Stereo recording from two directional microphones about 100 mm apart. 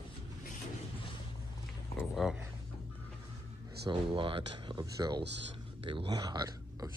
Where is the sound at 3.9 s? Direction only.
60° right (ahead or behind).